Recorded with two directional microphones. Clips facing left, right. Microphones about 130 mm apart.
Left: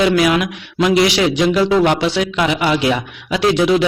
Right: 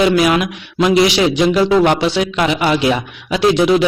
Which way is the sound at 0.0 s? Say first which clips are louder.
Right 1 dB; 25° right (ahead or behind).